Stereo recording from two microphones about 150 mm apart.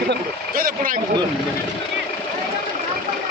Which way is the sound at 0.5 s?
70° right (ahead or behind).